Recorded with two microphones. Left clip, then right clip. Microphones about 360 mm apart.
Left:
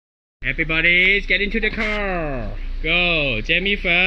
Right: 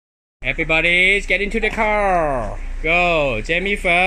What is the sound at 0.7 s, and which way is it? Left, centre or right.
Speech, centre.